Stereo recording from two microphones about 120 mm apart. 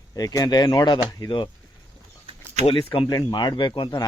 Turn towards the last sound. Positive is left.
turn(degrees=40)  # may be behind; listen again after turning